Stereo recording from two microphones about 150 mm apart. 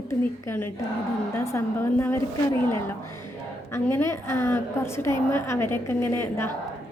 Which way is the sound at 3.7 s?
20° left (ahead or behind).